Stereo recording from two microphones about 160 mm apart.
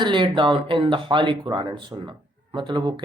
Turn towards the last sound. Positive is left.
turn(degrees=-30)  # may be behind; listen again after turning